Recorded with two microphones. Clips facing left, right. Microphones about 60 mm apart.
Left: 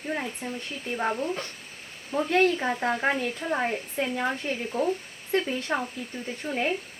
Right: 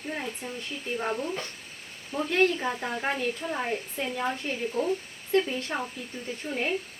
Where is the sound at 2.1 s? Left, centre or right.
Left.